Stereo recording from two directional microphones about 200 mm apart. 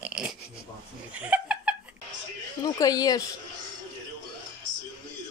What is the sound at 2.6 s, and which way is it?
Speech, 20° left (ahead or behind).